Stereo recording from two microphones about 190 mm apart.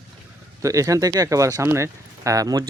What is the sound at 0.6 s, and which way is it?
Speech, 15° right (ahead or behind).